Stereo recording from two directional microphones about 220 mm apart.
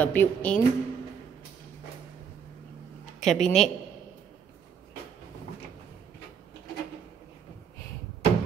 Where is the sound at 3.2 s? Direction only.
Centre (ahead or behind).